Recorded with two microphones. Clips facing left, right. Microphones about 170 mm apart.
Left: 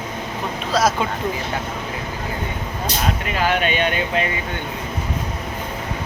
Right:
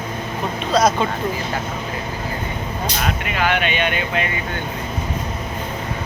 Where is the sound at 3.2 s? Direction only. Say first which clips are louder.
Even; 40° left (ahead or behind).